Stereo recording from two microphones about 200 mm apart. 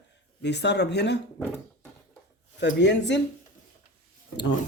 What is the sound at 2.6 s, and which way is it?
Speech, 60° left (ahead or behind).